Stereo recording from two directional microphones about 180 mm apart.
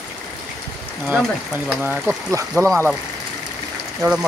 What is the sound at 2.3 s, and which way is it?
Speech, 15° right (ahead or behind).